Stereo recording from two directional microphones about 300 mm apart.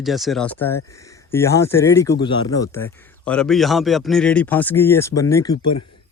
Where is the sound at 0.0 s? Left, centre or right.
Centre.